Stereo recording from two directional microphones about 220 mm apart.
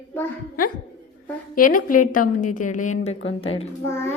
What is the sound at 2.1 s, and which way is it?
A woman's voice, 35° left (ahead or behind).